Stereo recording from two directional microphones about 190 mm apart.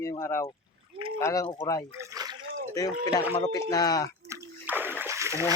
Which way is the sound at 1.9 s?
15° right (ahead or behind).